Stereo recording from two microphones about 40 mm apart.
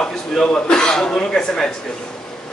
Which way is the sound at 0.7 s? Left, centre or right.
Centre.